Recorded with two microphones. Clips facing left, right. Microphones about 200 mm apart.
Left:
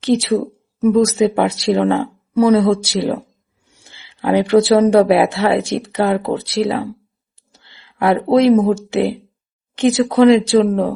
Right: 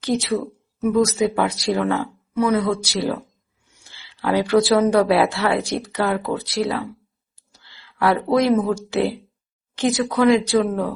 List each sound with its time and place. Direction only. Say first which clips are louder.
0.9 s speech: left 5 dB; 35° left (ahead or behind)
1.2 s speech: left 5 dB; 25° left (ahead or behind)